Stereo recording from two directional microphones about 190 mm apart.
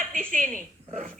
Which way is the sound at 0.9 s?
40° right (ahead or behind).